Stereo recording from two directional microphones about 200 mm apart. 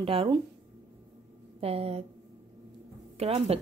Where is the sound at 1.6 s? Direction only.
30° right (ahead or behind).